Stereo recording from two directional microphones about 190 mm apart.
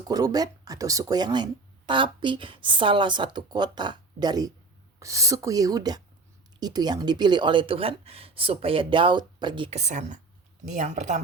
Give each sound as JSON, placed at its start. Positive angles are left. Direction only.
{"t": 0.1, "sound": "speech", "side_deg": -20}